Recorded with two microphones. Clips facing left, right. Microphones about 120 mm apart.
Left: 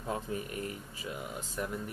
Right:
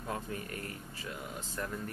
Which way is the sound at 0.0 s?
20° left (ahead or behind).